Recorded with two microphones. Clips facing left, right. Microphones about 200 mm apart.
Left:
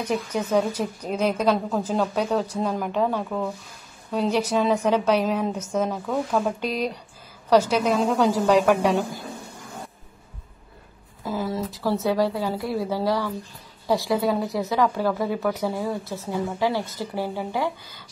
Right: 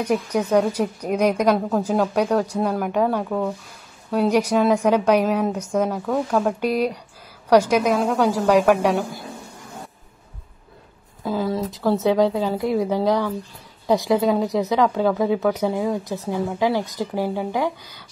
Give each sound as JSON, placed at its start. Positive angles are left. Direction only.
{"t": 0.0, "sound": "a woman's voice", "side_deg": -10}
{"t": 11.2, "sound": "a woman's voice", "side_deg": -15}